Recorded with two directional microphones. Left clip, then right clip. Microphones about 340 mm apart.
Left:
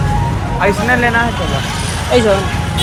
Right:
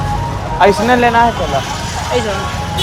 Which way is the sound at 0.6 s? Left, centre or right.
Right.